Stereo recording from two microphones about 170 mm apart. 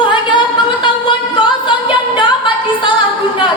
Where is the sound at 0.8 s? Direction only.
30° left (ahead or behind).